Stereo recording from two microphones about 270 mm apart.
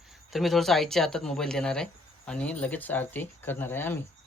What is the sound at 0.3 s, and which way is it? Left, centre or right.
Speech, centre.